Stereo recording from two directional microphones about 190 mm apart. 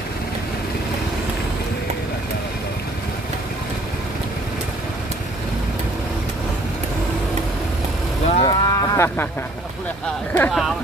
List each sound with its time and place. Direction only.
8.4 s cattle: 20° left (ahead or behind)
10.3 s speech: 5° left (ahead or behind)